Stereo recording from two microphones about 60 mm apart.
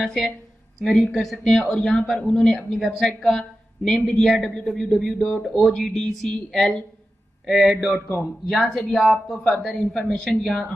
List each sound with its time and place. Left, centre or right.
0.0 s a woman's voice: centre